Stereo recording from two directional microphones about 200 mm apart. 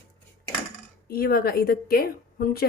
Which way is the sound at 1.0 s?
50° left (ahead or behind).